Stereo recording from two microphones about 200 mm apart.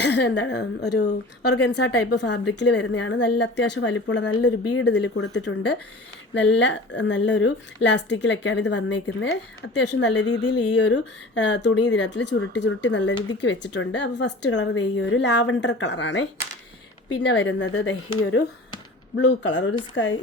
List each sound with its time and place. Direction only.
0.0 s a woman's voice: 60° left (ahead or behind)
10.2 s a sound: 20° left (ahead or behind)
10.8 s a woman's voice: 65° left (ahead or behind)
17.2 s speech: 80° left
18.2 s a woman's voice: 70° left (ahead or behind)